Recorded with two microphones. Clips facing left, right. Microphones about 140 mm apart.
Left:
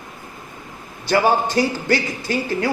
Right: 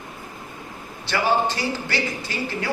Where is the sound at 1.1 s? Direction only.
45° left (ahead or behind).